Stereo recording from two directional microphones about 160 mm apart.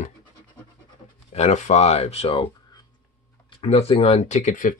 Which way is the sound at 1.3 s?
45° left (ahead or behind).